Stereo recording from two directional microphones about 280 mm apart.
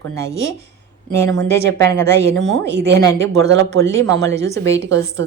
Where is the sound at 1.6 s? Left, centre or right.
Right.